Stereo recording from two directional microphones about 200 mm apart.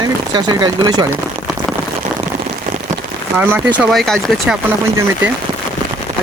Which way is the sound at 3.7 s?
Centre (ahead or behind).